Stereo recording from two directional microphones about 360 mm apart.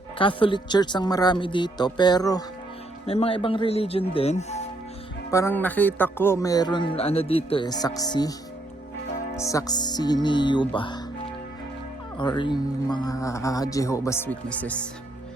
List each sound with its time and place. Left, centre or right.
0.2 s speech: centre
5.3 s speech: centre
12.1 s speech: centre